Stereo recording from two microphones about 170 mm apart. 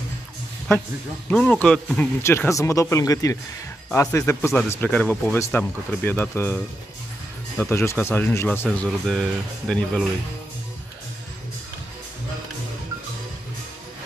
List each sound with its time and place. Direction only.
1.3 s speech: 5° left (ahead or behind)
8.6 s speech: centre (ahead or behind)